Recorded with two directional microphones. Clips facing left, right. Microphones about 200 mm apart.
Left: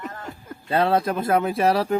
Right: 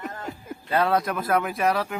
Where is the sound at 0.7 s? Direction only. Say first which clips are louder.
Left 2 dB; 30° left (ahead or behind).